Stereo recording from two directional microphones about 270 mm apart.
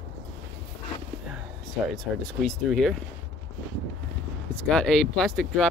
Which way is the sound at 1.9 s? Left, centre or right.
Centre.